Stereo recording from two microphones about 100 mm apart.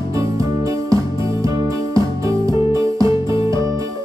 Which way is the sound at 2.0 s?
35° right (ahead or behind).